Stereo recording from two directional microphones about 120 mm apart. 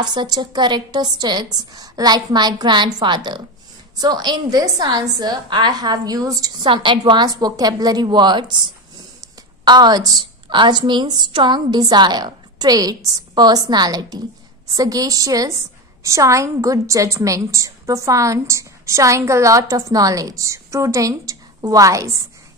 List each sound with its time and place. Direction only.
0.0 s a woman's voice: 35° right (ahead or behind)
6.6 s a woman's voice: 40° right (ahead or behind)
9.7 s a woman's voice: 35° right (ahead or behind)